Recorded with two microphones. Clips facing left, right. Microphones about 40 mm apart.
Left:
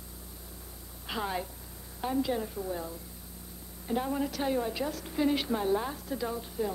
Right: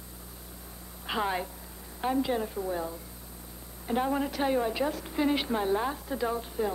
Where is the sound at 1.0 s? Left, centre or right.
Centre.